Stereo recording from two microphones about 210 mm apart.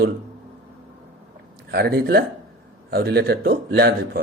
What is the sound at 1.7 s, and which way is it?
A man's voice, 50° right (ahead or behind).